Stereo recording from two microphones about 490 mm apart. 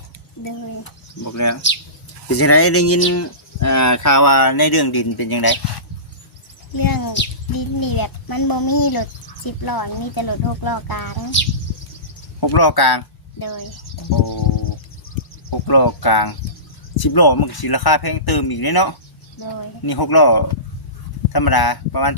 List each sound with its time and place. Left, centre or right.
0.4 s speech: left
6.7 s a child's voice: left
12.4 s speech: left
15.4 s a child's voice: left